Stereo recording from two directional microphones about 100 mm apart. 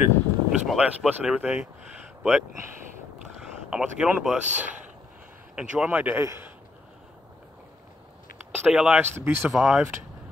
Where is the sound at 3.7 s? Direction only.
10° right (ahead or behind).